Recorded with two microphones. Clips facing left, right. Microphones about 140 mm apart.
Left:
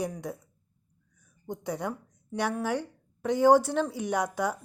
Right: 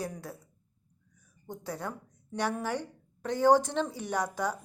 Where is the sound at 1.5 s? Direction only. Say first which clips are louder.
Left 5 dB; 15° left (ahead or behind).